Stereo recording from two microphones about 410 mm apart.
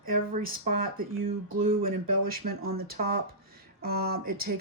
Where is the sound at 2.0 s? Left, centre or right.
Right.